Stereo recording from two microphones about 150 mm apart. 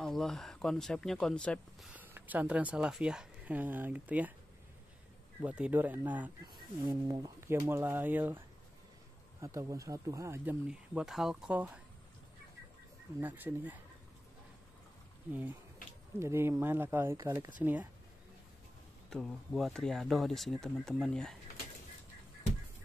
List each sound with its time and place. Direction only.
0.0 s speech: 5° left (ahead or behind)
1.9 s speech: 10° right (ahead or behind)
5.4 s speech: 10° right (ahead or behind)
6.4 s speech: 25° right (ahead or behind); by 11.8 s 10° right (ahead or behind)
13.2 s speech: 10° right (ahead or behind)
16.2 s speech: 15° right (ahead or behind)
19.0 s speech: centre (ahead or behind)